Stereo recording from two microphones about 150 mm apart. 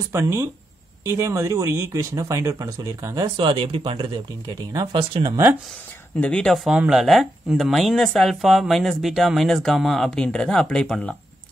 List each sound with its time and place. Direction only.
0.1 s speech: 15° right (ahead or behind)
3.3 s speech: 35° right (ahead or behind)
6.1 s speech: 5° left (ahead or behind)